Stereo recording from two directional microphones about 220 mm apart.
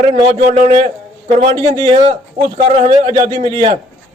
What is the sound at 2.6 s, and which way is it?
A man's voice, 35° right (ahead or behind).